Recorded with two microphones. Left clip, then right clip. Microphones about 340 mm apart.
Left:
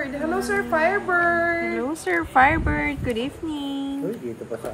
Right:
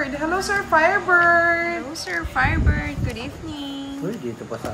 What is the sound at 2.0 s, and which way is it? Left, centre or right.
A woman's voice, centre.